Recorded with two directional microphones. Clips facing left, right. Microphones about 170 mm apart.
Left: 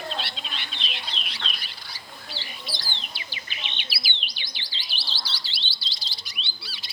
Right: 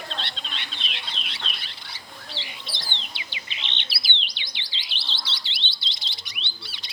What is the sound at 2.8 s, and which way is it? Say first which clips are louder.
Bird: even; 20° right (ahead or behind).